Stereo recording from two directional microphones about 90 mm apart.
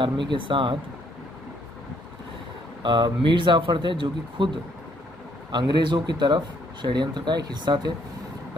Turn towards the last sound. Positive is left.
turn(degrees=-50)  # may be behind; listen again after turning